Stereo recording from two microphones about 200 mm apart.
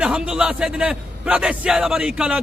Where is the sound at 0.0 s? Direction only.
5° right (ahead or behind).